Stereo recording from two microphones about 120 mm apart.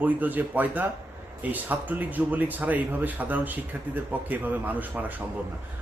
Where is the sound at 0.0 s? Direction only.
15° right (ahead or behind).